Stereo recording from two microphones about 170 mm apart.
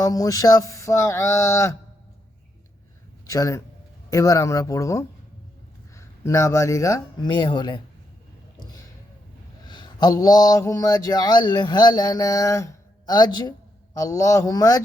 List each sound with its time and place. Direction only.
0.0 s a sound: 20° left (ahead or behind)
3.2 s speech: 20° left (ahead or behind)
9.6 s speech: 25° left (ahead or behind)